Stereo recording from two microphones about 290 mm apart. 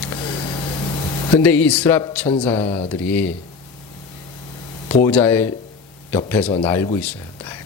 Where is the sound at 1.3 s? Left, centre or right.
Centre.